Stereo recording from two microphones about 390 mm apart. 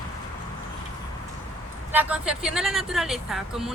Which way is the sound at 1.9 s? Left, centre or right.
Centre.